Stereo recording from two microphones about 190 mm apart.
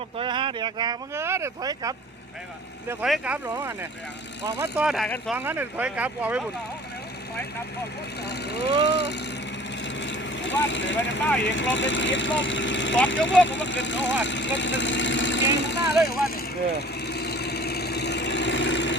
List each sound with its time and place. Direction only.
0.2 s speech: 25° right (ahead or behind)
3.0 s speech: 5° right (ahead or behind)
4.6 s speech: 5° right (ahead or behind)
5.4 s speech: 10° right (ahead or behind)
8.3 s speech: 60° left (ahead or behind)
9.8 s vehicle: 70° left (ahead or behind)
11.3 s speech: 75° left (ahead or behind)
13.4 s vehicle: 75° left (ahead or behind)